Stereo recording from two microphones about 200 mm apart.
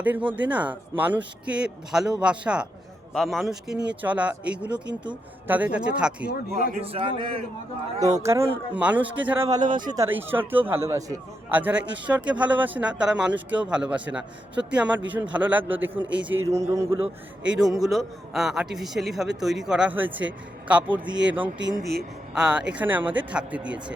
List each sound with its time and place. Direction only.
0.0 s a man's voice: 10° right (ahead or behind)
6.3 s a man's voice: 45° left (ahead or behind)
6.7 s a man's voice: 30° right (ahead or behind)
8.2 s a man's voice: 15° right (ahead or behind)
17.4 s a man's voice: 5° right (ahead or behind)
22.4 s a man's voice: 5° right (ahead or behind)